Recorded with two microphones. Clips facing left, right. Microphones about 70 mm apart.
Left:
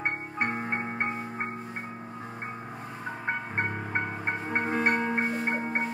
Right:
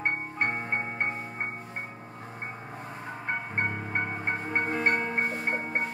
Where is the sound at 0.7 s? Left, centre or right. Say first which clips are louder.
Even; centre.